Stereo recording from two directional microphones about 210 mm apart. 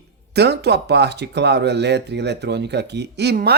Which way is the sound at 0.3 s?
50° right (ahead or behind).